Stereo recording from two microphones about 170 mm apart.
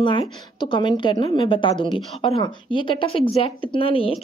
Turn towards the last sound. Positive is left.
turn(degrees=35)  # may be behind; listen again after turning